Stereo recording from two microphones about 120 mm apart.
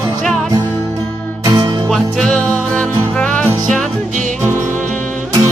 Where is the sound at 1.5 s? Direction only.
35° right (ahead or behind).